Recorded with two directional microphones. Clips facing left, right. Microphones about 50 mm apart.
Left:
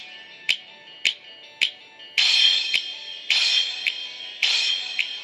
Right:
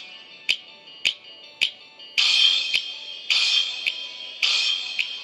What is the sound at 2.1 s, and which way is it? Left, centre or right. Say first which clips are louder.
Music: even; left.